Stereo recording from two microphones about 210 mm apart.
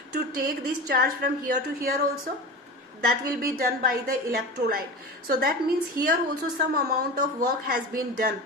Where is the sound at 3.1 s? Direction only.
45° right (ahead or behind).